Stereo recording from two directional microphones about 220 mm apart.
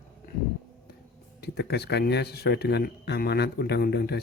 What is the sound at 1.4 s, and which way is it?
Speech, 50° left (ahead or behind).